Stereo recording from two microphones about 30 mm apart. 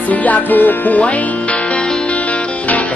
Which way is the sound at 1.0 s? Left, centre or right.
Left.